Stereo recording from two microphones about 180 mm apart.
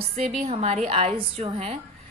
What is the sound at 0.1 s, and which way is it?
A woman's voice, 35° right (ahead or behind).